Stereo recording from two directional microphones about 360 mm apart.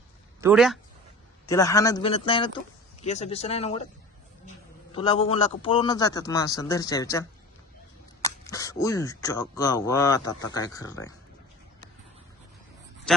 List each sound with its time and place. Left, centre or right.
0.4 s speech: centre
1.5 s speech: centre
4.9 s speech: centre
13.1 s a man's voice: centre